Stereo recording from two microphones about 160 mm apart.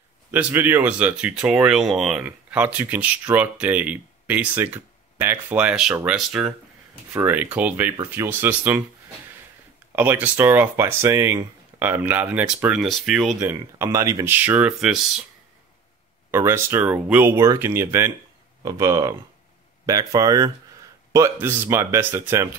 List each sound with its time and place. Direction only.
0.3 s speech: 10° right (ahead or behind)
9.9 s speech: 10° right (ahead or behind)
13.4 s speech: 15° right (ahead or behind)
16.3 s speech: 15° right (ahead or behind)